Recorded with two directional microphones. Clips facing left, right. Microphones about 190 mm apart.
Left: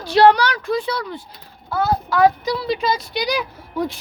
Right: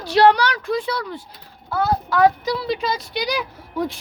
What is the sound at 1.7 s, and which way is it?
Speech, 10° left (ahead or behind).